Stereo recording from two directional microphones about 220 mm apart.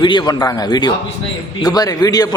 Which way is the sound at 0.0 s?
20° left (ahead or behind).